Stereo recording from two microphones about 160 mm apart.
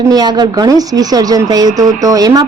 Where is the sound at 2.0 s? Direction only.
25° right (ahead or behind).